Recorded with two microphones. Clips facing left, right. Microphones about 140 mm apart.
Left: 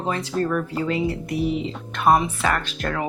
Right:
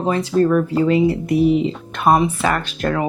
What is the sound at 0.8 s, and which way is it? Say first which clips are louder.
Speech: right 8 dB; 15° right (ahead or behind).